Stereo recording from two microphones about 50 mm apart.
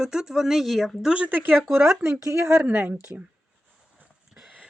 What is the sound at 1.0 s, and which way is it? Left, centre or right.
Speech, centre.